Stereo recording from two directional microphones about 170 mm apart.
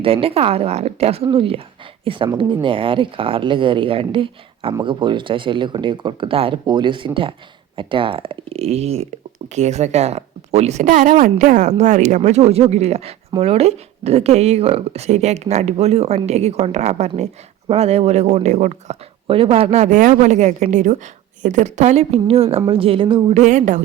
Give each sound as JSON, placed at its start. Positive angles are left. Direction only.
{"t": 0.0, "sound": "speech", "side_deg": -35}
{"t": 19.3, "sound": "a woman's voice", "side_deg": -35}
{"t": 23.4, "sound": "a woman's voice", "side_deg": -45}